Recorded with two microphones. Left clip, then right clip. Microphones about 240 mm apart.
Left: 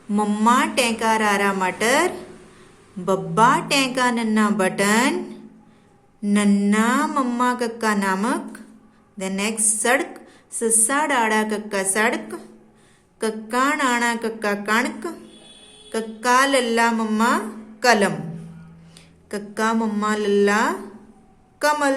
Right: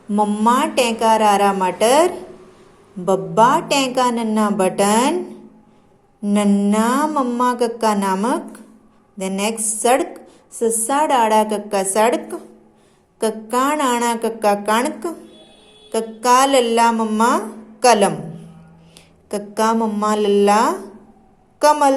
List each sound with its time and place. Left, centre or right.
0.1 s a woman's voice: centre
3.1 s a sound: centre
9.1 s a woman's voice: centre
17.7 s music: centre
19.3 s a woman's voice: centre